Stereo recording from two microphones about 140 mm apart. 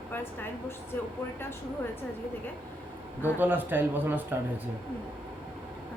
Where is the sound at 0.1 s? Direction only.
15° left (ahead or behind).